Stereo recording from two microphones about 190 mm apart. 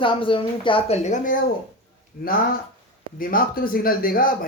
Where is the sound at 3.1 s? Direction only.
50° left (ahead or behind).